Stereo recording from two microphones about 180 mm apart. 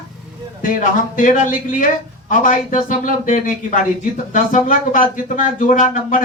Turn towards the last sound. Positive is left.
turn(degrees=50)  # may be behind; listen again after turning